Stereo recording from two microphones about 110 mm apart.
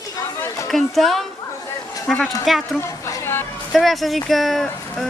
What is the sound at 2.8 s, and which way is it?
Speech, 25° left (ahead or behind).